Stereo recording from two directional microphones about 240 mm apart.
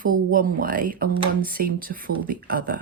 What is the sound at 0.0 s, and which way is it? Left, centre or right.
Speech, right.